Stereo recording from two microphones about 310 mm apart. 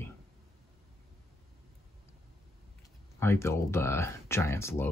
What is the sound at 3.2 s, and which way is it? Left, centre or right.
Speech, centre.